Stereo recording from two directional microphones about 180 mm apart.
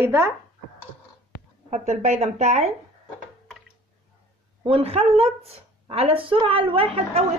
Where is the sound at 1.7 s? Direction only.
40° right (ahead or behind).